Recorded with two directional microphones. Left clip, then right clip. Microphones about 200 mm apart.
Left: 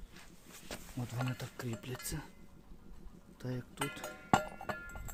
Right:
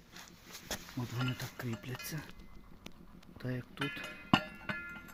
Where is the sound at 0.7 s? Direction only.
60° right (ahead or behind).